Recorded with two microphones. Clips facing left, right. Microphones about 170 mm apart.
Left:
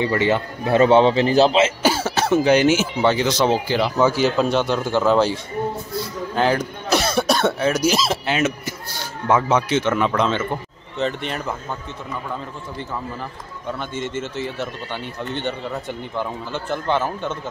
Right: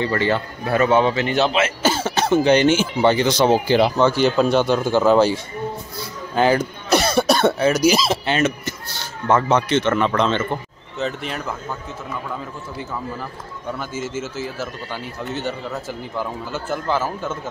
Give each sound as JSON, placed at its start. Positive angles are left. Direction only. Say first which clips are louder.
{"t": 0.0, "sound": "a man's voice", "louder": "left 1 dB", "side_deg": 15}
{"t": 1.8, "sound": "a man's voice", "louder": "even", "side_deg": 10}
{"t": 13.7, "sound": "speech", "louder": "even", "side_deg": -5}